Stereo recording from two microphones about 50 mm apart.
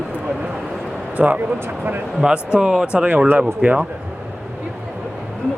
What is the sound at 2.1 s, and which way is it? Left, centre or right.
Speech, centre.